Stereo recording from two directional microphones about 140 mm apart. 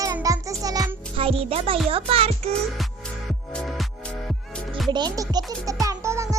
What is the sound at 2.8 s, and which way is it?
Music, centre (ahead or behind).